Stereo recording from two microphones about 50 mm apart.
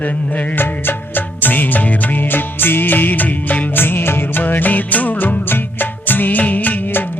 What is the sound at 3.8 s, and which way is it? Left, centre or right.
Music of bollywood, left.